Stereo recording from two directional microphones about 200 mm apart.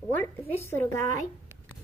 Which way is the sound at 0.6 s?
10° left (ahead or behind).